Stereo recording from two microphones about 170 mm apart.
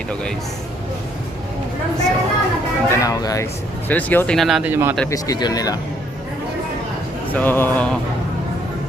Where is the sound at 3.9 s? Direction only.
10° left (ahead or behind).